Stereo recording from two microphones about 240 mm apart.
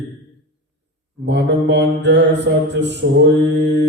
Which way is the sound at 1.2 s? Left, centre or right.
Right.